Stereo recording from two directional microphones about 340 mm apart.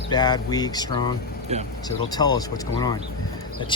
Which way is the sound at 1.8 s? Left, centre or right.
Centre.